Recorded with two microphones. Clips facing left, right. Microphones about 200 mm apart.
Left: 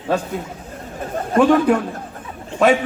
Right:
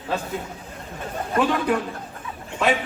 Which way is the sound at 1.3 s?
45° left (ahead or behind).